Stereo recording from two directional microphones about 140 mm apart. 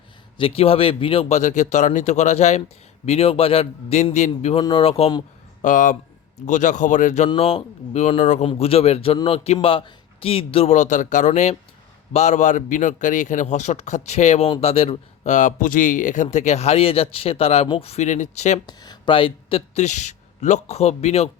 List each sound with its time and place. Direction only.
0.3 s speech: 40° left (ahead or behind)
4.6 s speech: 40° left (ahead or behind)
5.6 s a man's voice: 65° left (ahead or behind)
7.3 s speech: 45° left (ahead or behind)
8.4 s a man's voice: 45° left (ahead or behind)
18.6 s speech: 30° left (ahead or behind); by 21.2 s 50° left (ahead or behind)